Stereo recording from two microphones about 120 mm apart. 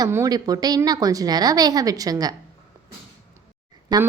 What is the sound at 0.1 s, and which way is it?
A woman's voice, 30° right (ahead or behind).